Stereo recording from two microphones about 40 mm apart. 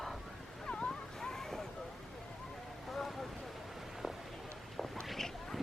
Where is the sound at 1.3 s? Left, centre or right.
Centre.